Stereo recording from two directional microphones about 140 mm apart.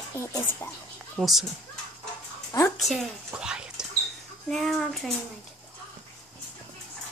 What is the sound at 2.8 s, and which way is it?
Speech, centre (ahead or behind).